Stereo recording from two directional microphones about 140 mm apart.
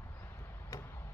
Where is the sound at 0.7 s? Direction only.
20° left (ahead or behind).